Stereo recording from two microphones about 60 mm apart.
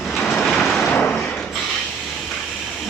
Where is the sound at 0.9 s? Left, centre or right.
Left.